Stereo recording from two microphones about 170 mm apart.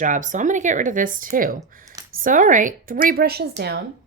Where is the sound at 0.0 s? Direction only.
50° right (ahead or behind).